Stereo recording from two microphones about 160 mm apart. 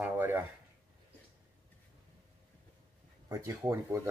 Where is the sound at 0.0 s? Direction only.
10° right (ahead or behind).